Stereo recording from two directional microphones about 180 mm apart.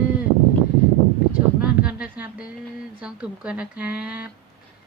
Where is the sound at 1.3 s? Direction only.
5° right (ahead or behind).